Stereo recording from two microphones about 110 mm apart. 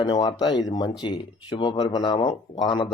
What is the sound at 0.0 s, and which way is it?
Speech, 40° left (ahead or behind).